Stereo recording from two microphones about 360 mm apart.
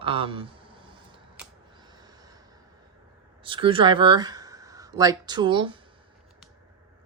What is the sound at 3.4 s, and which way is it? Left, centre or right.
Speech, centre.